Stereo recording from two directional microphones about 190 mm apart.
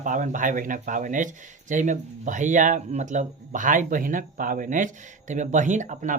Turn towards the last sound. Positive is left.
turn(degrees=-40)  # may be behind; listen again after turning